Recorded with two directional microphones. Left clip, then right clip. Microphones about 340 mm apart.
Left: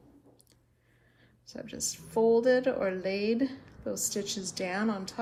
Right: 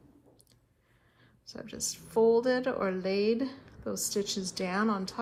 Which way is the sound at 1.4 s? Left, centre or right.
Centre.